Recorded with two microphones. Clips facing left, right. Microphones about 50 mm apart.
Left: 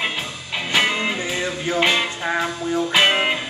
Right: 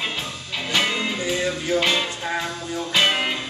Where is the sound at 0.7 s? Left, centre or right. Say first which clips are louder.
Left 3 dB; centre.